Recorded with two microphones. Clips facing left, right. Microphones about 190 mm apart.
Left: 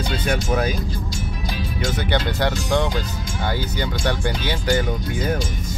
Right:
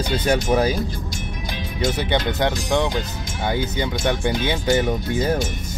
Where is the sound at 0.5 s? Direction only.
25° right (ahead or behind).